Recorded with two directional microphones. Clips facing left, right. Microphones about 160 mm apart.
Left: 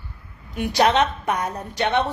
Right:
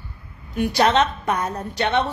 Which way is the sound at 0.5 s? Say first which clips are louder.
Right 1 dB; 15° left (ahead or behind).